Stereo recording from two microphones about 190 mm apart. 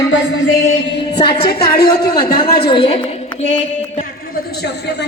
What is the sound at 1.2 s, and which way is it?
A woman's voice, 25° left (ahead or behind).